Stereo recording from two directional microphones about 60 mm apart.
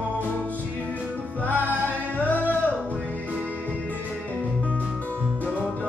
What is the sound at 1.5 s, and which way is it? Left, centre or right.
Music, right.